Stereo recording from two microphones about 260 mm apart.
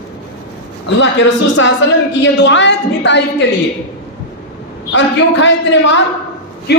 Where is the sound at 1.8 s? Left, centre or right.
Left.